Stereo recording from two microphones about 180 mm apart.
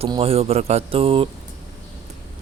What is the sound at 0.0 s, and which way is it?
A man's voice, 30° right (ahead or behind).